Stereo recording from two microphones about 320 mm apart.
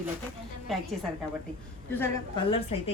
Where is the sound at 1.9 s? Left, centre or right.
Centre.